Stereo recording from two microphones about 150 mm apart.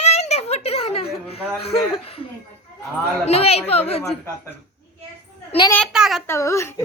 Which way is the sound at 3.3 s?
45° left (ahead or behind).